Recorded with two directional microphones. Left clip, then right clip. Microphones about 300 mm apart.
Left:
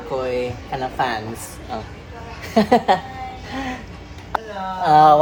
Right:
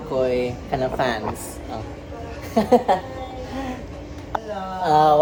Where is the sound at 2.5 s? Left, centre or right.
Left.